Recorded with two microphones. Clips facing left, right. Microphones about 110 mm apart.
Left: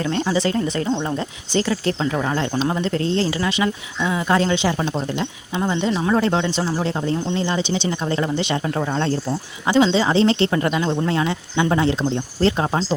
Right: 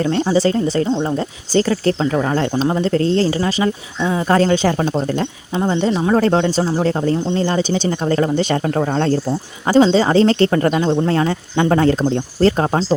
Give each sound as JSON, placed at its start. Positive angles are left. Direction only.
{"t": 0.0, "sound": "speech", "side_deg": -40}
{"t": 5.5, "sound": "speech", "side_deg": -25}
{"t": 6.1, "sound": "speech", "side_deg": -40}